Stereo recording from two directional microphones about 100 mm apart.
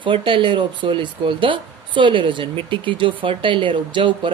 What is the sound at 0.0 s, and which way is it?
Speech, 55° right (ahead or behind).